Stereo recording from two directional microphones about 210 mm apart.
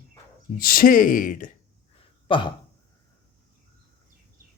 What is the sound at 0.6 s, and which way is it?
Speech, 45° left (ahead or behind).